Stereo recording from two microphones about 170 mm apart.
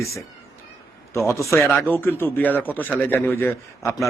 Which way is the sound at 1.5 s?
15° left (ahead or behind).